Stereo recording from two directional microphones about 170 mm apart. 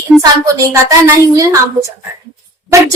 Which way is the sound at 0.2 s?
20° right (ahead or behind).